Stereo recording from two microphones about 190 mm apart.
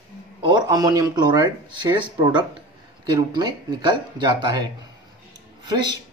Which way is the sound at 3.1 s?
20° right (ahead or behind).